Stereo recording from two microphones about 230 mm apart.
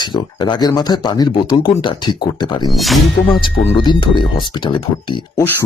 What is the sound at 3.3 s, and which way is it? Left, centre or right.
Speech, left.